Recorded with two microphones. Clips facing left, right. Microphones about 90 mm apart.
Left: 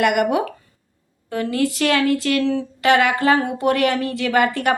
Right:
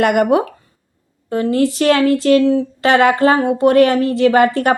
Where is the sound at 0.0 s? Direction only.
35° right (ahead or behind).